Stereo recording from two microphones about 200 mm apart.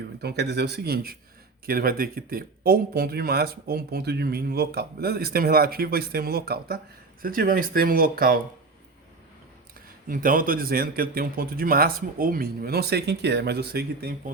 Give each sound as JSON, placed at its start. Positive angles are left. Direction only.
{"t": 0.2, "sound": "speech", "side_deg": -55}
{"t": 10.1, "sound": "speech", "side_deg": -45}